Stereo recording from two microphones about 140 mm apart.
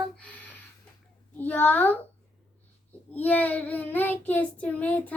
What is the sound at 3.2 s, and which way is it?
Child singing, 10° left (ahead or behind).